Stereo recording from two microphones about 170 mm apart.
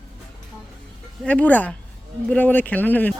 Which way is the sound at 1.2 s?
10° left (ahead or behind).